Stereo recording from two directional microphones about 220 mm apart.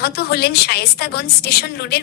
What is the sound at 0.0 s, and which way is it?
A woman's voice, 45° left (ahead or behind).